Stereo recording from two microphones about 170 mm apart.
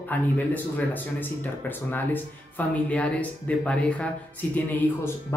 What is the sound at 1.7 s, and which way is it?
A man's voice, 10° left (ahead or behind).